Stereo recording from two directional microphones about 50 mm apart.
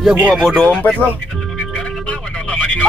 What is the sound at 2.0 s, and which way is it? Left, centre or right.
Vehicle, left.